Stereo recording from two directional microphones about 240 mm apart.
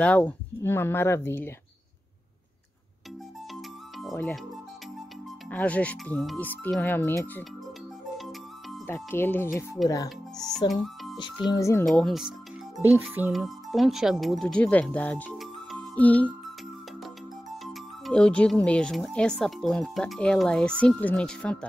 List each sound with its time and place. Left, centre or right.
0.0 s speech: centre
4.1 s speech: centre
5.5 s speech: centre
8.2 s music: centre
10.6 s a child's voice: centre
11.8 s speech: centre
18.0 s speech: centre